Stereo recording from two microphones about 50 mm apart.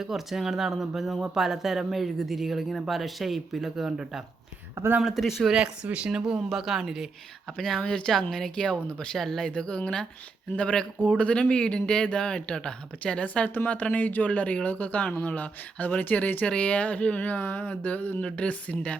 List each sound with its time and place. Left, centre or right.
0.0 s speech: centre
5.5 s speech: right
6.5 s speech: centre
7.6 s speech: centre
9.1 s speech: centre
9.6 s a man's voice: centre